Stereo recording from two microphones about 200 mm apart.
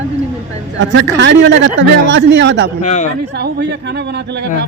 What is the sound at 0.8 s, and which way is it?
Speech, 65° right (ahead or behind).